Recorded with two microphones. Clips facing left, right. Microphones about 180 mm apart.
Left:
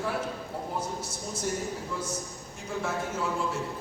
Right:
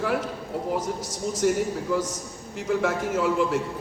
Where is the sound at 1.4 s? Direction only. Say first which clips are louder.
Right 10 dB; 80° right.